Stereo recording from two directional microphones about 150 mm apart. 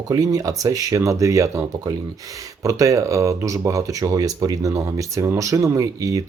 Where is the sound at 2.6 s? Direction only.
20° right (ahead or behind).